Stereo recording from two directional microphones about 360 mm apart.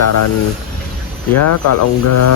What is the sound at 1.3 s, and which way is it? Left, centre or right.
Speech, left.